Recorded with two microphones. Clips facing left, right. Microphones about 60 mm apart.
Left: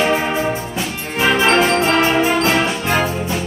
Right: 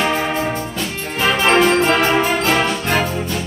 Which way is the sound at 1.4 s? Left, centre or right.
Centre.